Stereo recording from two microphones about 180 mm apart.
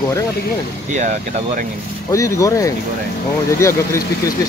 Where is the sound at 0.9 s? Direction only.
45° right (ahead or behind).